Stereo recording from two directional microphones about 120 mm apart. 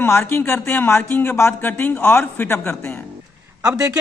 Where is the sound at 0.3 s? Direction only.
15° left (ahead or behind).